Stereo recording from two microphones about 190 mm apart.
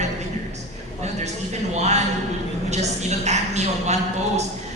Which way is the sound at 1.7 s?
35° right (ahead or behind).